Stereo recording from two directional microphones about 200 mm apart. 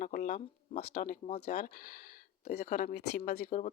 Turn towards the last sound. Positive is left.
turn(degrees=40)  # may be behind; listen again after turning